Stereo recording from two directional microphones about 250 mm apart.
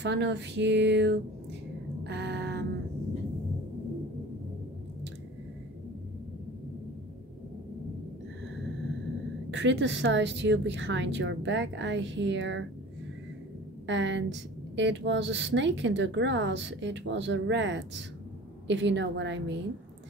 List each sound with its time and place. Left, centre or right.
0.0 s speech: right
2.0 s a sound: right
9.5 s speech: right
13.8 s speech: right